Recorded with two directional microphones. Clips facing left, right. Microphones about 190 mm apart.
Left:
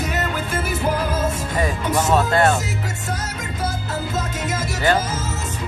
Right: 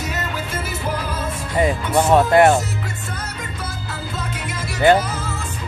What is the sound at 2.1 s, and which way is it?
Speech, 20° right (ahead or behind).